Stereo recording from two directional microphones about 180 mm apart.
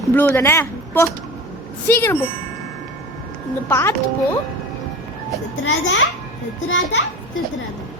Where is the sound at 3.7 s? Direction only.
15° left (ahead or behind).